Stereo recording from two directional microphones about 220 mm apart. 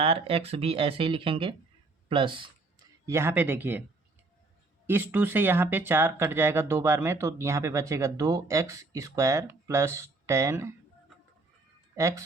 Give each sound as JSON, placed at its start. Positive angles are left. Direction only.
{"t": 0.0, "sound": "speech", "side_deg": -25}
{"t": 3.1, "sound": "speech", "side_deg": -10}
{"t": 4.9, "sound": "speech", "side_deg": -10}
{"t": 11.9, "sound": "speech", "side_deg": -15}